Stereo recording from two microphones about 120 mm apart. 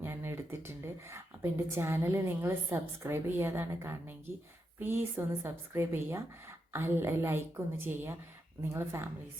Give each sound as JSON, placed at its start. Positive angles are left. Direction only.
{"t": 0.0, "sound": "a woman's voice", "side_deg": -20}